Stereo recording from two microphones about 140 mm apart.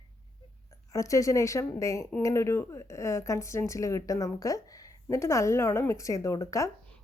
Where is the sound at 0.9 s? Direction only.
25° left (ahead or behind).